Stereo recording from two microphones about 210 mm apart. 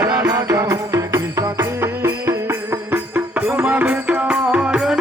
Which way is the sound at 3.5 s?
5° right (ahead or behind).